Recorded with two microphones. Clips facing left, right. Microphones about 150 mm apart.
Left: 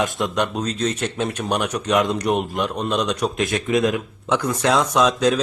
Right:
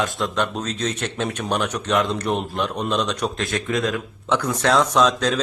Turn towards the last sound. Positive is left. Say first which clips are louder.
# left 1 dB
turn(degrees=10)  # may be behind; listen again after turning